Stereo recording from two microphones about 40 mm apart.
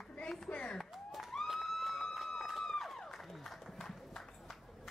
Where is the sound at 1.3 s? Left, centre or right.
Centre.